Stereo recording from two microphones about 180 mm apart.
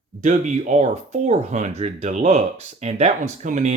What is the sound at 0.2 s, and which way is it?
Speech, 45° right (ahead or behind).